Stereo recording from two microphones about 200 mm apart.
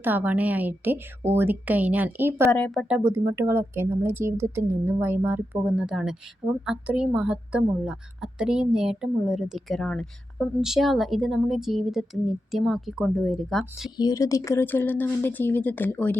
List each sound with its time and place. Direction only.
0.0 s speech: 10° right (ahead or behind)
2.5 s speech: 5° left (ahead or behind)
2.9 s a woman's voice: 15° right (ahead or behind)
13.9 s speech: 20° left (ahead or behind)